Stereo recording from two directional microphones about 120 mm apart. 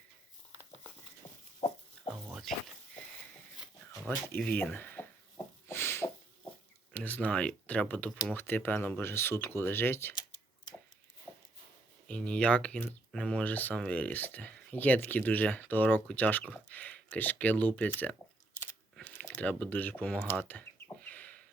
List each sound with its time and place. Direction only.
1.6 s dog: 65° left (ahead or behind)
2.2 s a sound: centre (ahead or behind)
4.4 s speech: 10° left (ahead or behind)
5.6 s a sound: 20° left (ahead or behind)
6.9 s speech: 15° left (ahead or behind)
11.3 s walk: 20° left (ahead or behind)
12.0 s speech: 10° left (ahead or behind)
20.4 s chicken: 15° left (ahead or behind)